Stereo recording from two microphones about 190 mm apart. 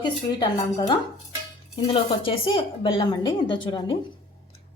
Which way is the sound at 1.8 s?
30° left (ahead or behind).